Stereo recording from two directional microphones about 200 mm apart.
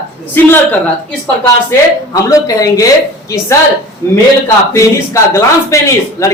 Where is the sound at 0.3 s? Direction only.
10° left (ahead or behind).